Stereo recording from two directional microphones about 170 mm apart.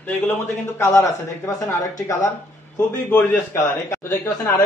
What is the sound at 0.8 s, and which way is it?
Speech, 20° left (ahead or behind).